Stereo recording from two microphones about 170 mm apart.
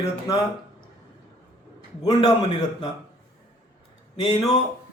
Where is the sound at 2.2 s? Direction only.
30° left (ahead or behind).